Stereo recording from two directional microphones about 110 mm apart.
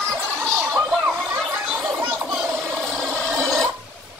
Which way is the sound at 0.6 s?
5° right (ahead or behind).